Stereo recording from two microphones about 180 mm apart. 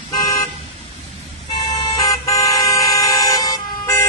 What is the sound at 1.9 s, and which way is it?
Vehicle, 20° left (ahead or behind).